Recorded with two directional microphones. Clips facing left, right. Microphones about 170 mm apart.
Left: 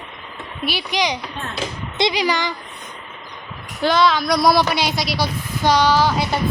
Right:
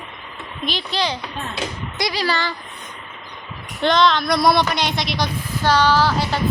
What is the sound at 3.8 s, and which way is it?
Speech, 5° left (ahead or behind).